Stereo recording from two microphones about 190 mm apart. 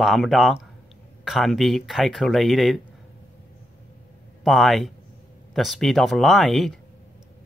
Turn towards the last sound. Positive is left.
turn(degrees=0)  # may be behind; listen again after turning